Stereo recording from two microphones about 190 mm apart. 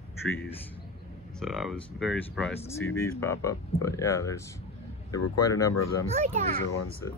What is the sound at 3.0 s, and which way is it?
Speech, 15° left (ahead or behind).